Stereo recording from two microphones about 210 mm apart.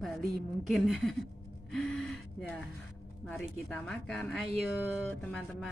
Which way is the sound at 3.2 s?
Centre (ahead or behind).